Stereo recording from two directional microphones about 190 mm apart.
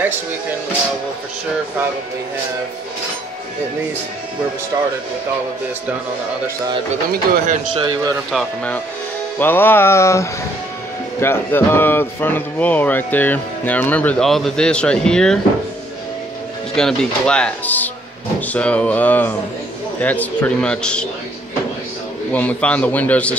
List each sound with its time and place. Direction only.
7.7 s a man's voice: 25° right (ahead or behind)
8.3 s speech: 5° left (ahead or behind)
16.7 s speech: 5° left (ahead or behind)
22.3 s speech: 10° left (ahead or behind)